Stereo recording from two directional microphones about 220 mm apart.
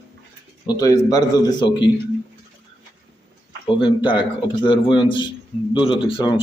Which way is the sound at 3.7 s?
20° left (ahead or behind).